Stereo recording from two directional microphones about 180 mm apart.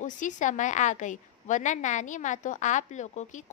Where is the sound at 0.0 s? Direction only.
45° left (ahead or behind).